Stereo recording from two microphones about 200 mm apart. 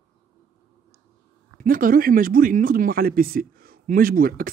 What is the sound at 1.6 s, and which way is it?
Speech, 45° right (ahead or behind).